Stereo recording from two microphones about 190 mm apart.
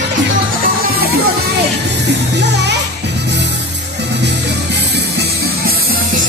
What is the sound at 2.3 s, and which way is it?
Music, 65° right (ahead or behind).